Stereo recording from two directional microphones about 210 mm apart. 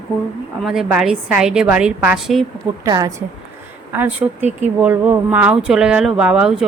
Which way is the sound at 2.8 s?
15° right (ahead or behind).